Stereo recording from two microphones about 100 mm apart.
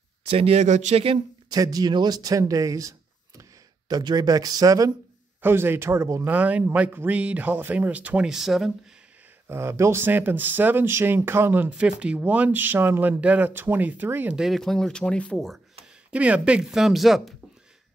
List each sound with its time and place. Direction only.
0.2 s speech: 85° right
1.5 s speech: 40° right (ahead or behind)
3.9 s speech: 40° right (ahead or behind)
5.4 s speech: 25° right (ahead or behind)
6.2 s a man's voice: 15° right (ahead or behind)
9.5 s a man's voice: 25° right (ahead or behind)
14.3 s speech: centre (ahead or behind)
16.1 s speech: 15° right (ahead or behind)